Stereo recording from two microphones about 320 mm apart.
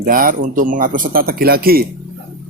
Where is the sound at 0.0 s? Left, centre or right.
Right.